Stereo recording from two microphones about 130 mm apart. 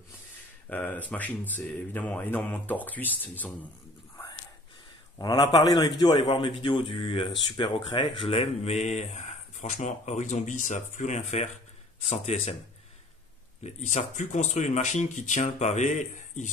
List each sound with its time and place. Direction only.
0.7 s speech: 15° left (ahead or behind)
5.2 s a man's voice: 30° left (ahead or behind); by 11.5 s 65° left (ahead or behind)
13.7 s speech: 60° left (ahead or behind)